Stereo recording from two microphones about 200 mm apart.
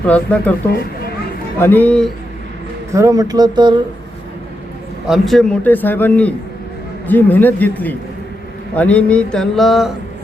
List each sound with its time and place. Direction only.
0.1 s a man's voice: 5° left (ahead or behind)
1.5 s a man's voice: 10° left (ahead or behind)
2.9 s speech: 15° right (ahead or behind)
5.0 s a man's voice: centre (ahead or behind)
8.7 s mantra: 5° left (ahead or behind)